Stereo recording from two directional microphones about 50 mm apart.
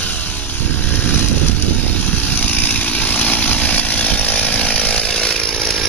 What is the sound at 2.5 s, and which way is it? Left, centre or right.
Vehicle, left.